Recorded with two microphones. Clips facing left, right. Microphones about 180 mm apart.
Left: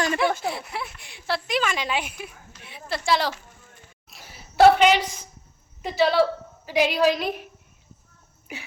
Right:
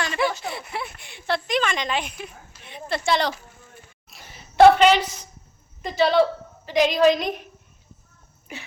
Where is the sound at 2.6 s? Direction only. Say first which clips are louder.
Right 3 dB; 5° left (ahead or behind).